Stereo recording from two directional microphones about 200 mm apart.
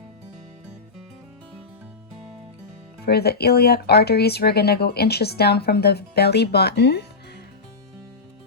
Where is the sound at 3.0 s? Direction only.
50° left (ahead or behind).